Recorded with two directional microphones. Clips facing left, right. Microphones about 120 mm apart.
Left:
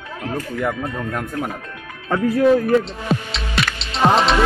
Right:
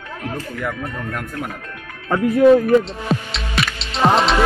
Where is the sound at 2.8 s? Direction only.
Centre (ahead or behind).